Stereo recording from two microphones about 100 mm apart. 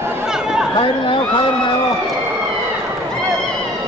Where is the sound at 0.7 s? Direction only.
60° left (ahead or behind).